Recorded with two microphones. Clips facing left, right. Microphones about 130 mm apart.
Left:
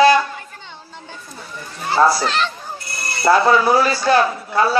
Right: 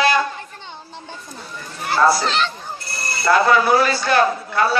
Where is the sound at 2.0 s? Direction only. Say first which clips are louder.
Left 1 dB; 30° left (ahead or behind).